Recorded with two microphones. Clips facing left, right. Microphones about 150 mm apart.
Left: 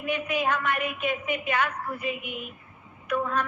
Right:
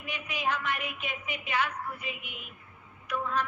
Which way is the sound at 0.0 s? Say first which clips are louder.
Left 7 dB; 55° left (ahead or behind).